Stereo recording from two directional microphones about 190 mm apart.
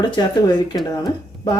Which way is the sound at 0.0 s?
25° left (ahead or behind).